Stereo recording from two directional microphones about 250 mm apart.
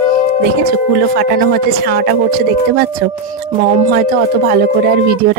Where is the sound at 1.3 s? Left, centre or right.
Right.